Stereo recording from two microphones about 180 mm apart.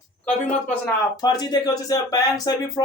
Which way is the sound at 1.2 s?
20° left (ahead or behind).